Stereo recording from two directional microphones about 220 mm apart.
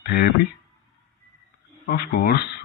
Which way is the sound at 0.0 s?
45° left (ahead or behind).